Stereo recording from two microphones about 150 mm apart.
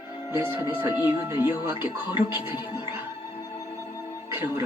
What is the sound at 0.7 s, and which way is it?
Speech, 15° right (ahead or behind).